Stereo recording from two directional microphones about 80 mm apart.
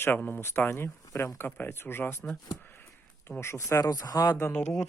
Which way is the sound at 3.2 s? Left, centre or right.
Left.